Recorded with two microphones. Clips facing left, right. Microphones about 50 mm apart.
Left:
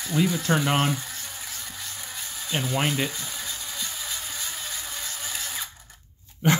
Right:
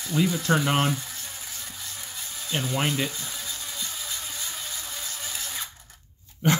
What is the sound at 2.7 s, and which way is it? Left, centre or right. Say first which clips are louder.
Speech: left 1 dB; centre.